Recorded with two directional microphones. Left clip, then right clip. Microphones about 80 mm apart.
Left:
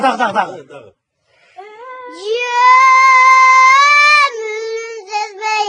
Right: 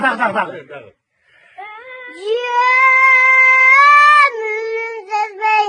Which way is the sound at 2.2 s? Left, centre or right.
Left.